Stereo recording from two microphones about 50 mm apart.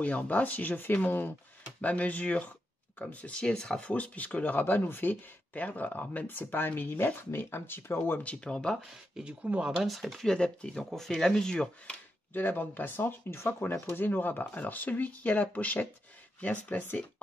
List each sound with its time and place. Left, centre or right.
0.0 s speech: left
3.9 s speech: left
5.5 s speech: left
8.2 s speech: left
9.2 s speech: right
9.8 s speech: centre
10.3 s speech: centre
12.4 s speech: left